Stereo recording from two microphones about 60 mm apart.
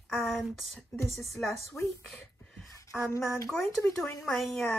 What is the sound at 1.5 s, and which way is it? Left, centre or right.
Speech, left.